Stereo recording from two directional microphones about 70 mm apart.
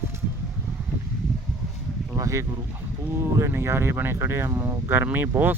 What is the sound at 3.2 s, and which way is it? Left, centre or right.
Speech, right.